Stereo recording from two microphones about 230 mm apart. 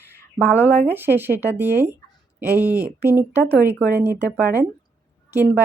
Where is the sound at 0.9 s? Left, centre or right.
Centre.